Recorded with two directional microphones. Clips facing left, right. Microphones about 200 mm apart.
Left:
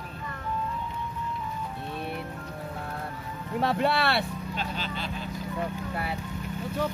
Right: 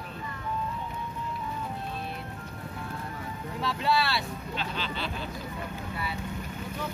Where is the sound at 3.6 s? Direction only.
60° left (ahead or behind).